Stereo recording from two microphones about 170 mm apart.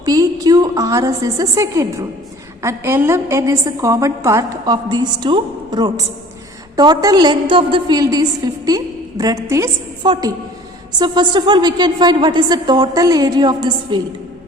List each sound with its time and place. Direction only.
0.0 s a woman's voice: 20° right (ahead or behind)